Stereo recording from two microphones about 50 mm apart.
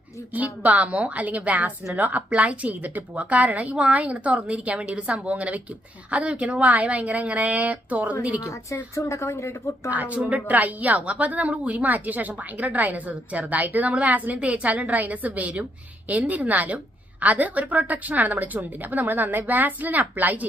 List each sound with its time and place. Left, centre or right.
0.3 s speech: right
8.4 s speech: left
9.9 s a woman's voice: right